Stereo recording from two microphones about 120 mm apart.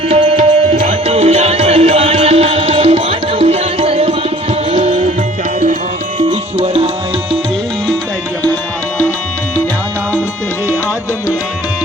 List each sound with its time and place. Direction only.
0.1 s music: 55° right (ahead or behind); by 5.1 s 70° right (ahead or behind)
6.6 s music: 55° right (ahead or behind)